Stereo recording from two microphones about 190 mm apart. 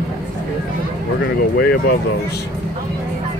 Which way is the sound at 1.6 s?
55° left (ahead or behind).